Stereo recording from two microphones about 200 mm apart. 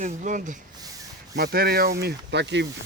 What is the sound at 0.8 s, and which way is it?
Rub, 15° right (ahead or behind).